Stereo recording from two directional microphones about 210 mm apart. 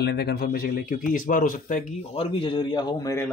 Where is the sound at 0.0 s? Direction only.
50° left (ahead or behind); by 3.3 s 15° left (ahead or behind).